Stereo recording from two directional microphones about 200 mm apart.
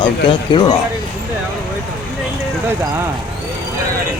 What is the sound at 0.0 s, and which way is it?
Speech, 25° left (ahead or behind).